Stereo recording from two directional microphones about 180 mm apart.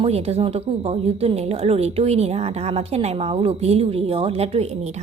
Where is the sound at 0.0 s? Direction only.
35° right (ahead or behind).